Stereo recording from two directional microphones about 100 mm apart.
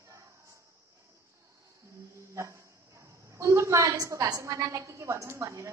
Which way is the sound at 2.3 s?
30° right (ahead or behind).